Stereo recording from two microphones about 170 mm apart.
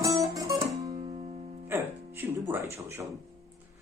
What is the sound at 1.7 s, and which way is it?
Music, 15° right (ahead or behind).